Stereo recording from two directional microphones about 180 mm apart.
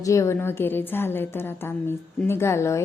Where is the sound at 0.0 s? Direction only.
15° left (ahead or behind).